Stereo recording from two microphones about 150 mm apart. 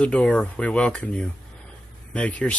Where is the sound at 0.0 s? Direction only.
5° left (ahead or behind).